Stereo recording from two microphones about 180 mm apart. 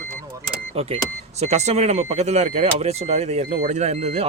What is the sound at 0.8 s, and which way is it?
Speech, 35° right (ahead or behind).